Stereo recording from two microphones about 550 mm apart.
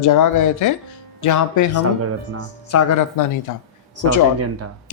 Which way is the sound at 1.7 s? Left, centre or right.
Right.